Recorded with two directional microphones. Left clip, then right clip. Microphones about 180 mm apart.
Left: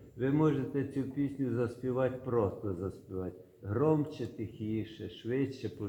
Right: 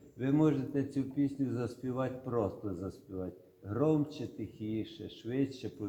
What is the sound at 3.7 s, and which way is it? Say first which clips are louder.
A man's voice: left 1 dB; 55° right (ahead or behind).